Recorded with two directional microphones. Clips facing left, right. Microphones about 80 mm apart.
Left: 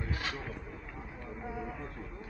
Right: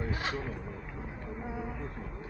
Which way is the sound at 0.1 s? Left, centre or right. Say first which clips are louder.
Right 3 dB; right.